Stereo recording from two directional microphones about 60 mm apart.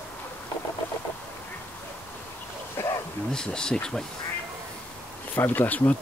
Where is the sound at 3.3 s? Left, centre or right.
Centre.